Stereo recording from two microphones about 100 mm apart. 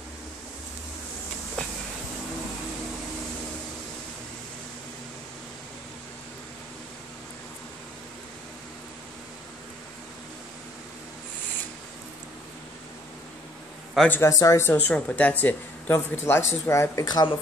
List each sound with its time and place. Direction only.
14.0 s speech: 20° left (ahead or behind)
14.4 s speech: 30° left (ahead or behind)
14.7 s speech: 15° left (ahead or behind)
17.0 s speech: 45° left (ahead or behind)